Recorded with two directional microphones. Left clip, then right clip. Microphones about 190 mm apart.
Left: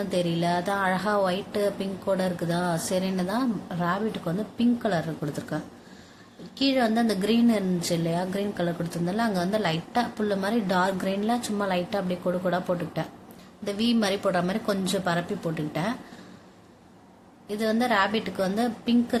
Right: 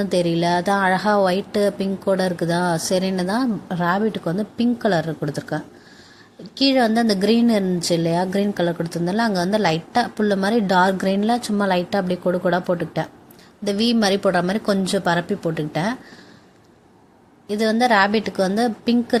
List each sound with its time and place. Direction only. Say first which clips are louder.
0.0 s a woman's voice: right 7 dB; 30° right (ahead or behind)
17.5 s a woman's voice: right 7 dB; 30° right (ahead or behind)